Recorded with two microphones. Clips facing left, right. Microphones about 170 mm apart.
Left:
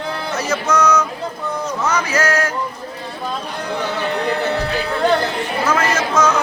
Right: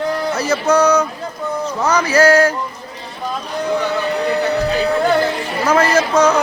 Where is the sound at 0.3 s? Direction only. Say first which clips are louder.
Right 3 dB; 30° right (ahead or behind).